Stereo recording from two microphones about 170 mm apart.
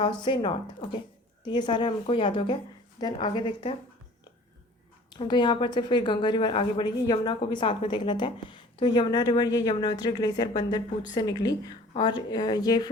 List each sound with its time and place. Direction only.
0.0 s a woman's voice: 30° left (ahead or behind)
5.1 s a woman's voice: 25° left (ahead or behind)